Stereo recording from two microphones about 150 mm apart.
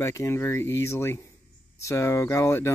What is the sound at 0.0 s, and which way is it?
Speech, 20° left (ahead or behind).